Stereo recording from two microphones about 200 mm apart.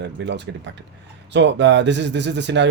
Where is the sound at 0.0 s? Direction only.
60° right (ahead or behind).